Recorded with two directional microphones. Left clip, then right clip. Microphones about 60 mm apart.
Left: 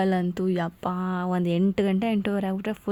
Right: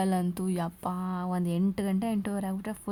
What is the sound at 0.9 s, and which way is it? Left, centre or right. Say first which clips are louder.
Speech: left 6 dB; left.